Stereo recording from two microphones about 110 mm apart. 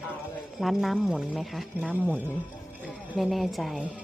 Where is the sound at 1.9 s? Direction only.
15° right (ahead or behind).